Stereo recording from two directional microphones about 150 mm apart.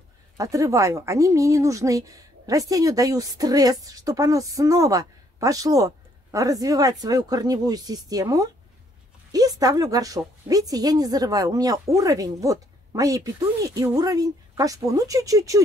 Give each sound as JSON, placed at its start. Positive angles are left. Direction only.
{"t": 0.4, "sound": "a woman's voice", "side_deg": -20}